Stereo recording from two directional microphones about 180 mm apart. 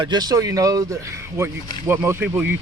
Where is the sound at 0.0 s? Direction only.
25° right (ahead or behind).